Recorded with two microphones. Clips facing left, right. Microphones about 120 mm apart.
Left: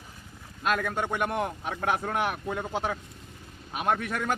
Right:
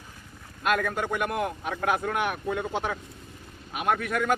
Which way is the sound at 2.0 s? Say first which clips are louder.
Right 1 dB; 30° left (ahead or behind).